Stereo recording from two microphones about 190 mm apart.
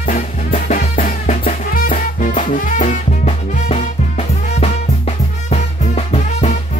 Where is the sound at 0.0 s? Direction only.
45° left (ahead or behind).